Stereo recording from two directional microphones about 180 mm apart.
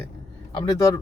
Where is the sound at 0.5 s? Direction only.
20° left (ahead or behind).